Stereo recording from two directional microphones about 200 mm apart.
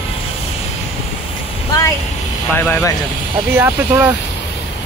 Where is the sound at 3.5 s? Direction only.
10° right (ahead or behind).